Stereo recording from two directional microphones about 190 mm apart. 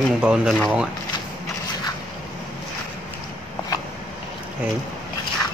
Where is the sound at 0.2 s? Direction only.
5° right (ahead or behind).